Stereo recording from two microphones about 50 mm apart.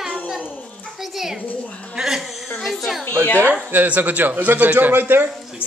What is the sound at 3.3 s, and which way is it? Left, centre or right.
Speech, left.